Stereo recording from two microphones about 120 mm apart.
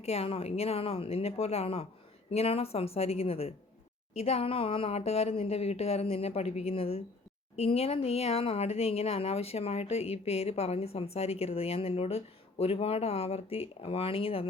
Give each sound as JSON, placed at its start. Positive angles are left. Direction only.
{"t": 0.0, "sound": "speech", "side_deg": 60}